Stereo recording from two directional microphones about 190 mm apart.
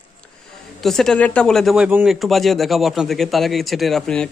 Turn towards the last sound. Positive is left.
turn(degrees=5)  # may be behind; listen again after turning